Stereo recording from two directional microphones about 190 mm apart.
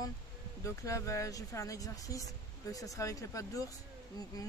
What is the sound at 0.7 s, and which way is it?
Speech, 15° left (ahead or behind).